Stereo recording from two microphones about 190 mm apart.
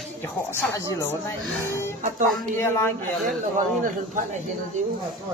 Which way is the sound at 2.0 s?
45° right (ahead or behind).